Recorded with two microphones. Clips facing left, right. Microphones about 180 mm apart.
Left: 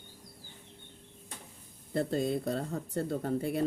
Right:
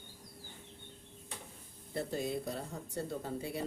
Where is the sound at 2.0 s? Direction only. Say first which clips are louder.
Left 6 dB; 60° left (ahead or behind).